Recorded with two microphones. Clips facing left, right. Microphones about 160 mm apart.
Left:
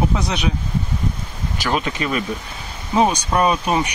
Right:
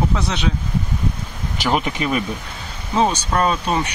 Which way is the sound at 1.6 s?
15° right (ahead or behind).